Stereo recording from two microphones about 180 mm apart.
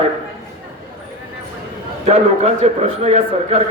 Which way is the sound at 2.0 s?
35° right (ahead or behind).